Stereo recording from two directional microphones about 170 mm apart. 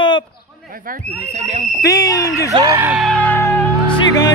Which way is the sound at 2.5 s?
25° right (ahead or behind).